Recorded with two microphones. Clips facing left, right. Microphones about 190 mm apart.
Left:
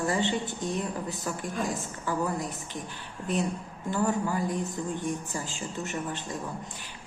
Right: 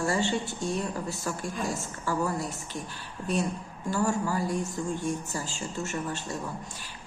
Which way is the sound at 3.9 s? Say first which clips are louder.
Even; 20° left (ahead or behind).